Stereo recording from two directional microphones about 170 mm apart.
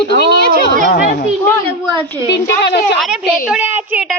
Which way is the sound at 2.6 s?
90° left.